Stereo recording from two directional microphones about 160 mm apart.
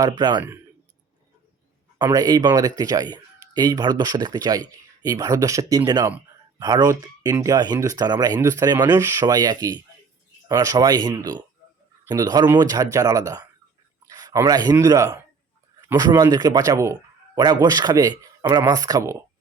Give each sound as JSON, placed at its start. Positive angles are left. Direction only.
{"t": 0.2, "sound": "speech", "side_deg": -30}
{"t": 2.0, "sound": "a man's voice", "side_deg": -25}